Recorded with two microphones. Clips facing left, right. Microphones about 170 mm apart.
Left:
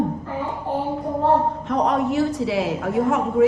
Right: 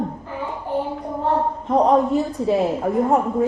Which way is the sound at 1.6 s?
75° left (ahead or behind).